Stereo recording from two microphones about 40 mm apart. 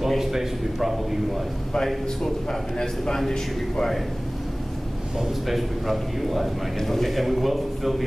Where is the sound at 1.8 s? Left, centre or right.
Centre.